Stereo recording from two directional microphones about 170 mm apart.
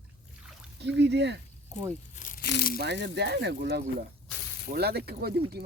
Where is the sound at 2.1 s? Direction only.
50° left (ahead or behind).